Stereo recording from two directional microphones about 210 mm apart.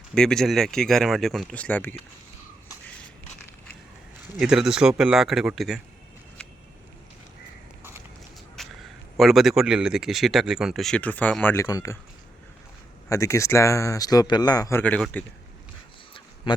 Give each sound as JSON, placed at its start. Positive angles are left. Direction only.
{"t": 0.1, "sound": "speech", "side_deg": 5}
{"t": 4.4, "sound": "speech", "side_deg": -5}
{"t": 8.6, "sound": "a sound", "side_deg": 0}
{"t": 9.1, "sound": "speech", "side_deg": 0}
{"t": 13.1, "sound": "speech", "side_deg": 15}
{"t": 16.1, "sound": "a sound", "side_deg": 20}